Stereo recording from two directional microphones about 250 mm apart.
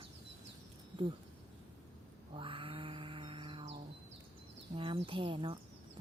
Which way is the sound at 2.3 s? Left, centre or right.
Right.